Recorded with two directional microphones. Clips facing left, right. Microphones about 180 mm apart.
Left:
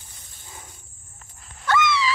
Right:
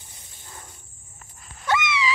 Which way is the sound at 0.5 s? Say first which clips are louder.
Even; 5° left (ahead or behind).